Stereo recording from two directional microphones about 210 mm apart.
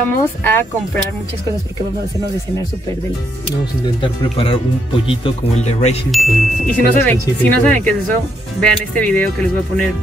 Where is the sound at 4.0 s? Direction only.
25° left (ahead or behind).